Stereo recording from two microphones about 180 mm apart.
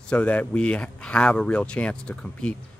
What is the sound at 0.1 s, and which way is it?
Speech, 10° left (ahead or behind).